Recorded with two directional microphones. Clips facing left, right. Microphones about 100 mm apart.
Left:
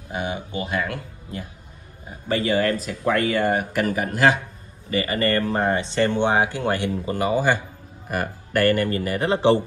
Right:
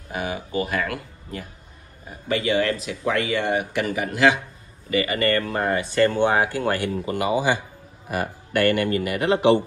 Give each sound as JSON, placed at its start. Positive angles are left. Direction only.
{"t": 0.1, "sound": "a sound", "side_deg": 25}
{"t": 0.6, "sound": "speech", "side_deg": 25}
{"t": 2.2, "sound": "speech", "side_deg": 35}
{"t": 7.2, "sound": "speech", "side_deg": 45}